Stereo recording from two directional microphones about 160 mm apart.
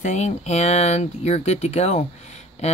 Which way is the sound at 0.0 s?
45° left (ahead or behind).